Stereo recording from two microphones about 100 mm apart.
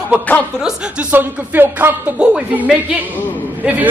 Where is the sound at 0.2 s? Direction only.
15° left (ahead or behind).